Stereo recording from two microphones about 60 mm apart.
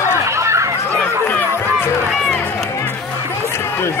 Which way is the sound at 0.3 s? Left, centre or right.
Right.